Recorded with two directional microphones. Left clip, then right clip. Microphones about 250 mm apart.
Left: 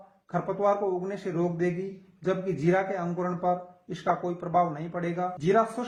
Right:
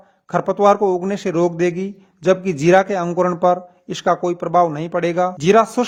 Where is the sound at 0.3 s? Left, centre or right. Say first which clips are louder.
Right 12 dB; right.